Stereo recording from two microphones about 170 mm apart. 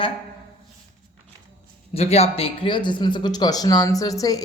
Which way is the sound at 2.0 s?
35° left (ahead or behind).